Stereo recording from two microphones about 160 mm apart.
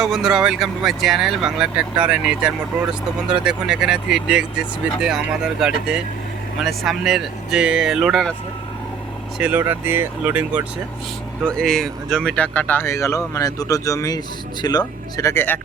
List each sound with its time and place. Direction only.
0.0 s speech: centre (ahead or behind)
9.4 s speech: 10° right (ahead or behind)
11.4 s speech: 5° left (ahead or behind)